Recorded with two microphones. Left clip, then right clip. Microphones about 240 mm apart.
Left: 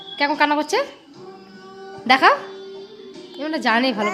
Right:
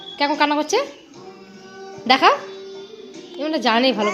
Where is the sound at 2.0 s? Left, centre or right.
Centre.